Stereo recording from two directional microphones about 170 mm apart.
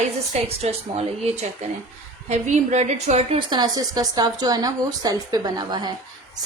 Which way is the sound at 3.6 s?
25° right (ahead or behind).